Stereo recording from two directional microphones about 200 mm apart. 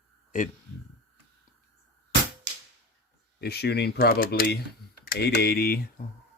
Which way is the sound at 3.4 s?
55° left (ahead or behind).